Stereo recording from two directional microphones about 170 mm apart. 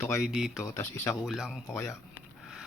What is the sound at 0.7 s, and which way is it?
Speech, 15° left (ahead or behind).